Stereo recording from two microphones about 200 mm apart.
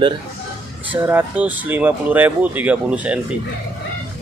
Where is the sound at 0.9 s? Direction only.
10° right (ahead or behind).